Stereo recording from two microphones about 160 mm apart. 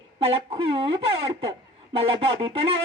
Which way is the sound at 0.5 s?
35° right (ahead or behind).